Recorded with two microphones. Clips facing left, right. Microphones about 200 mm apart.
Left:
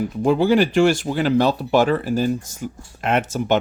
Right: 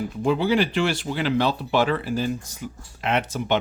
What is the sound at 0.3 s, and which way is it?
Speech, 45° left (ahead or behind).